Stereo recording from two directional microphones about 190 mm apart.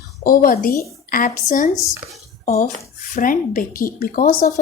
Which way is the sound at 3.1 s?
45° left (ahead or behind).